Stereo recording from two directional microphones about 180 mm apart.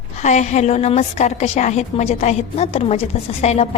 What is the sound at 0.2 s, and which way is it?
A woman's voice, 40° left (ahead or behind).